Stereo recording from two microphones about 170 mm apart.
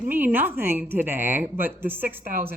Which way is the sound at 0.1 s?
10° right (ahead or behind).